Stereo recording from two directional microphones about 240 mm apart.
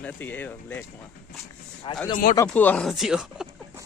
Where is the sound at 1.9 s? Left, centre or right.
Left.